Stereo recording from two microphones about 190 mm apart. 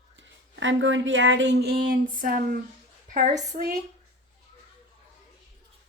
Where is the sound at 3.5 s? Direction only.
40° right (ahead or behind).